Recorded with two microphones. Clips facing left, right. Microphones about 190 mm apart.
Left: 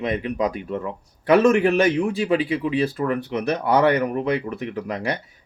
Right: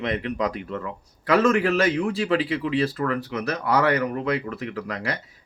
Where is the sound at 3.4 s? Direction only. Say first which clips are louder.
Left 4 dB; 25° left (ahead or behind).